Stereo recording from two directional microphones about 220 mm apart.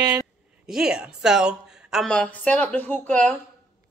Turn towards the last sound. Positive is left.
turn(degrees=5)  # may be behind; listen again after turning